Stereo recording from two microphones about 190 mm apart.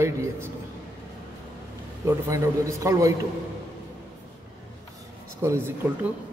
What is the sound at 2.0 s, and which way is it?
Speech, 15° right (ahead or behind).